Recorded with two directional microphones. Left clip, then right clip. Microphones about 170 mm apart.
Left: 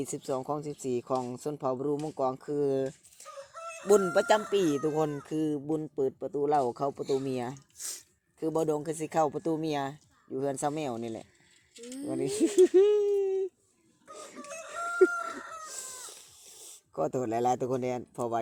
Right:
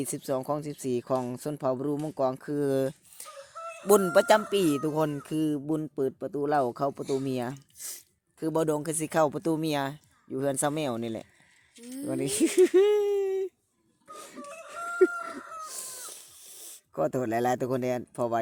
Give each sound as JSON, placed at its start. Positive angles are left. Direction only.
{"t": 0.0, "sound": "speech", "side_deg": -45}
{"t": 3.5, "sound": "chicken", "side_deg": 40}
{"t": 3.8, "sound": "speech", "side_deg": -40}
{"t": 7.8, "sound": "speech", "side_deg": -20}
{"t": 8.4, "sound": "speech", "side_deg": -50}
{"t": 14.1, "sound": "a sound", "side_deg": -40}
{"t": 14.7, "sound": "chicken", "side_deg": -40}
{"t": 15.4, "sound": "chicken", "side_deg": 40}
{"t": 15.6, "sound": "cat", "side_deg": -45}